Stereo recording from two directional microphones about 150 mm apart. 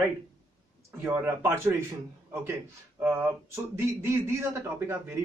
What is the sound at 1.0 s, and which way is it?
Speech, 15° right (ahead or behind).